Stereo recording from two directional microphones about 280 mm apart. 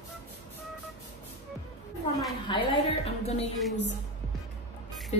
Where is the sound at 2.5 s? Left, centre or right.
Centre.